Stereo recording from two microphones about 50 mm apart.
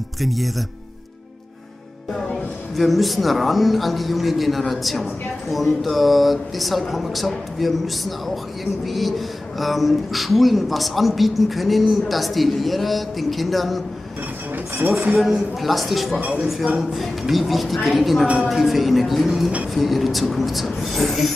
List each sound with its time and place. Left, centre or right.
0.2 s speech: centre
2.7 s speech: centre
14.9 s a man's voice: right
15.1 s speech: centre
16.2 s a man's voice: right
16.9 s speech: centre